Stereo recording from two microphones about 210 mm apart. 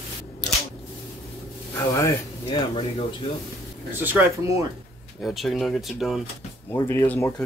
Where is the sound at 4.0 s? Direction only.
10° right (ahead or behind).